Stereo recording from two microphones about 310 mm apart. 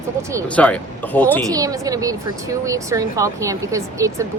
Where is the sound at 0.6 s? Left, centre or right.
Centre.